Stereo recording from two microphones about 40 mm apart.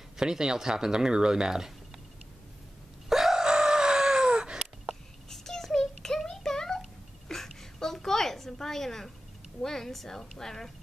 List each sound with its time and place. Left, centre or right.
0.2 s speech: centre
3.1 s chicken: centre
5.3 s a sound: centre
9.6 s a woman's voice: centre